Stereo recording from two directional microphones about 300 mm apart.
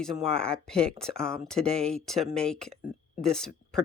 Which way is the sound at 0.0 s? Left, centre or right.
Centre.